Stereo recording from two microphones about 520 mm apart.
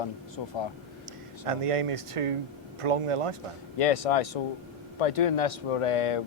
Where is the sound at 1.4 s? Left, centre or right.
Right.